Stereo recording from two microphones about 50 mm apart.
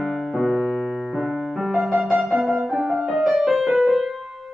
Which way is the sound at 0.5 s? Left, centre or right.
Centre.